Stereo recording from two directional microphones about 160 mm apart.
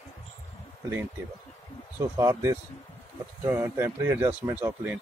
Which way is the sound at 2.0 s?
15° right (ahead or behind).